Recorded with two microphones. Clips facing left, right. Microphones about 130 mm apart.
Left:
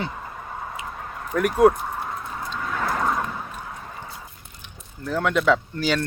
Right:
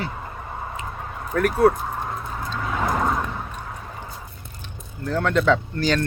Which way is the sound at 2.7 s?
15° right (ahead or behind).